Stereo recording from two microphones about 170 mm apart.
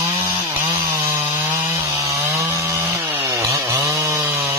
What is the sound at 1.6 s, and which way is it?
Chainsaw, 20° right (ahead or behind).